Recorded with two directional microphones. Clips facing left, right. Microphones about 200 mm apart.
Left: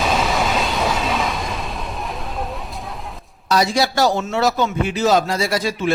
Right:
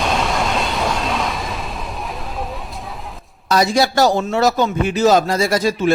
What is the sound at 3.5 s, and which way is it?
A man's voice, 50° right (ahead or behind).